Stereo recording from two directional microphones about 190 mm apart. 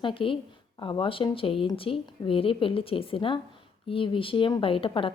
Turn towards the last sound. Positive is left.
turn(degrees=30)  # may be behind; listen again after turning